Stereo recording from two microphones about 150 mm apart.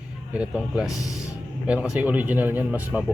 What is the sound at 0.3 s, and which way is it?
Speech, 10° right (ahead or behind).